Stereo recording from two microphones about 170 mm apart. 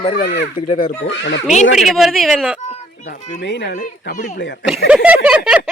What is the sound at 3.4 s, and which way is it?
Speech, 90° left.